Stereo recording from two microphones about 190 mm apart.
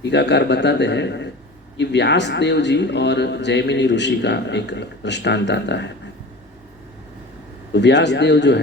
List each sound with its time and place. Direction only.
0.0 s speech: 65° left (ahead or behind)
7.7 s speech: 65° left (ahead or behind)